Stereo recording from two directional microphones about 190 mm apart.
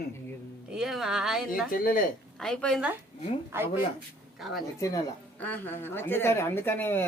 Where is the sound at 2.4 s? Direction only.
5° left (ahead or behind).